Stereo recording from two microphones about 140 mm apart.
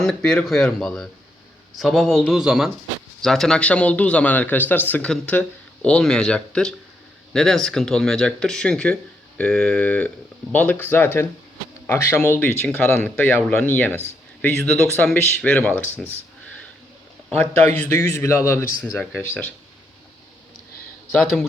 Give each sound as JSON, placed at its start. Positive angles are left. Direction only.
{"t": 0.3, "sound": "a man's voice", "side_deg": 0}
{"t": 17.3, "sound": "a man's voice", "side_deg": 10}
{"t": 21.2, "sound": "speech", "side_deg": 0}